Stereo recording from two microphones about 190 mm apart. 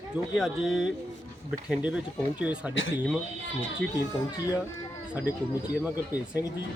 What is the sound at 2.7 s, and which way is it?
Speech, 90° left.